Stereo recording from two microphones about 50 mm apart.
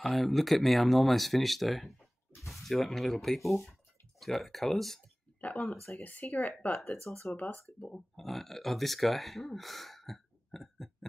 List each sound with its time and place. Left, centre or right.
0.0 s speech: centre
5.4 s speech: left
8.2 s speech: centre